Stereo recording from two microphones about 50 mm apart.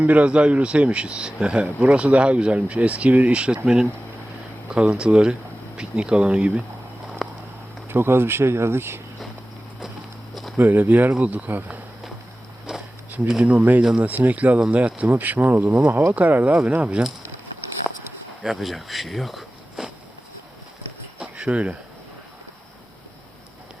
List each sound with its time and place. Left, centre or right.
0.0 s speech: right
4.7 s speech: centre
7.2 s a sound: centre
7.9 s speech: right
10.6 s speech: right
12.7 s a sound: centre
13.4 s speech: right
18.4 s speech: centre
21.2 s cricket: centre